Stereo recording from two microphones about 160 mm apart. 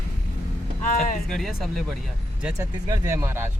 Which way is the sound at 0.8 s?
60° left (ahead or behind).